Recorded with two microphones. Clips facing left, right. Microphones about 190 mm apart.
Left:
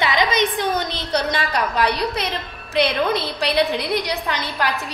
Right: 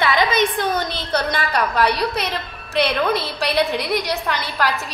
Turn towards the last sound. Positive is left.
turn(degrees=15)  # may be behind; listen again after turning